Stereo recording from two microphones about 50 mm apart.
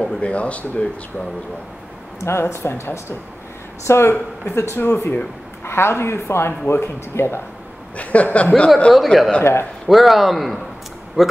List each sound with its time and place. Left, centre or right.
0.0 s speech: left
2.1 s speech: left
2.4 s speech: left
8.0 s speech: left
8.9 s speech: centre
9.4 s speech: left
9.8 s speech: centre
11.2 s speech: centre